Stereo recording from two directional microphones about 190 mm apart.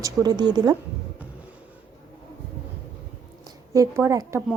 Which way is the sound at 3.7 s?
15° right (ahead or behind).